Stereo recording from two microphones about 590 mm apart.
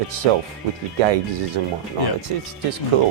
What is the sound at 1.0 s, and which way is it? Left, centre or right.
Speech, right.